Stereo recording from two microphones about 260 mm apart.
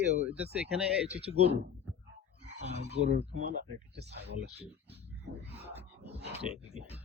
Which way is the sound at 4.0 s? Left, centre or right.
Right.